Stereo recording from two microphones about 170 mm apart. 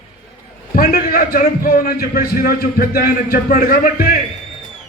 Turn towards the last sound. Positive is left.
turn(degrees=55)  # may be behind; listen again after turning